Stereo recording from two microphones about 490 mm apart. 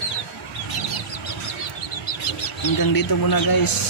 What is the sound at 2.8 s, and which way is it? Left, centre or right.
Speech, left.